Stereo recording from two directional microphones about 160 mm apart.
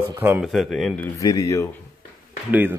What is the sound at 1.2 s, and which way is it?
Speech, 20° left (ahead or behind).